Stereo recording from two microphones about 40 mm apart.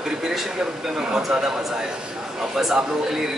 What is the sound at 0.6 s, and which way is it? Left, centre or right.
Speech, centre.